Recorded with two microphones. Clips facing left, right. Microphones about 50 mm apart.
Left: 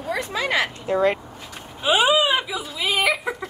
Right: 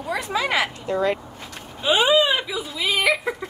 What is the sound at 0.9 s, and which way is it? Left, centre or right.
Speech, left.